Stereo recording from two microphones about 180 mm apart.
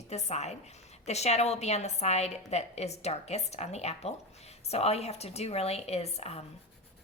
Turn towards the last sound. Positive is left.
turn(degrees=35)  # may be behind; listen again after turning